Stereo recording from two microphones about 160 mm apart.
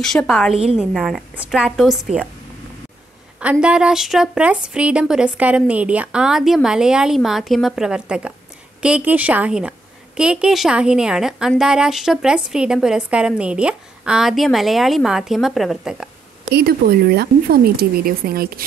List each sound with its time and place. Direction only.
0.0 s a woman's voice: 5° left (ahead or behind)
3.3 s a woman's voice: 5° right (ahead or behind)
16.4 s speech: 80° right